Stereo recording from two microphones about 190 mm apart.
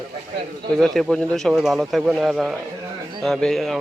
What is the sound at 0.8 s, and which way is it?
Speech, centre (ahead or behind).